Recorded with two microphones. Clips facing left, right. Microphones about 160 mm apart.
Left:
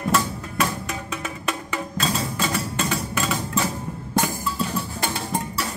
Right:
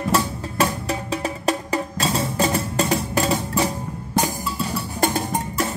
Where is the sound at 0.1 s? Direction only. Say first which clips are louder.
Right 1 dB; 30° right (ahead or behind).